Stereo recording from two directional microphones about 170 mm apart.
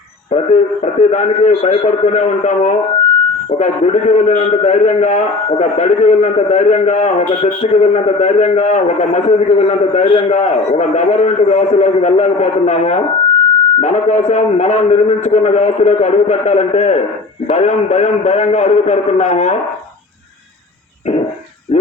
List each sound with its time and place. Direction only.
0.3 s a man's voice: 40° left (ahead or behind)